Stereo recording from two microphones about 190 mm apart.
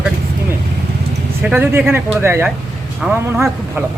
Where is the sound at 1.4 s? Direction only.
10° right (ahead or behind).